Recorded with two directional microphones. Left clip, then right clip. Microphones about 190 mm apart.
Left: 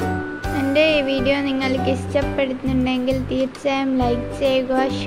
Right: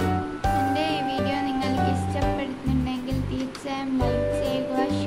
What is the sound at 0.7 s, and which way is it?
Music, 20° left (ahead or behind).